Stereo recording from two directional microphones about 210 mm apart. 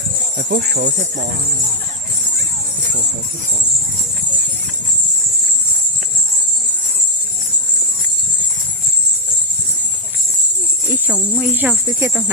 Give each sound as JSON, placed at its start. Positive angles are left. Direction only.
{"t": 0.3, "sound": "jingle bell", "side_deg": -50}
{"t": 10.8, "sound": "speech", "side_deg": -5}